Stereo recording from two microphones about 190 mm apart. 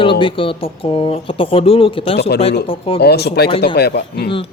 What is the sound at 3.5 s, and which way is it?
Speech, 30° left (ahead or behind).